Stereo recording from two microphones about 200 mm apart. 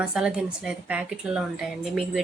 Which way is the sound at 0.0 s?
5° right (ahead or behind).